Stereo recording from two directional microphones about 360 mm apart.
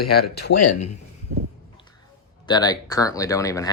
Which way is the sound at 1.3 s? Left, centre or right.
Right.